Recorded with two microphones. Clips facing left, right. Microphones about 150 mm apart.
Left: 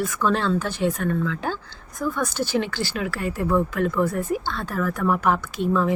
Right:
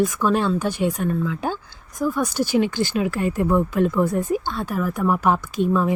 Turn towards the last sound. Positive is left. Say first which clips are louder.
# right 2 dB
turn(degrees=-15)  # may be behind; listen again after turning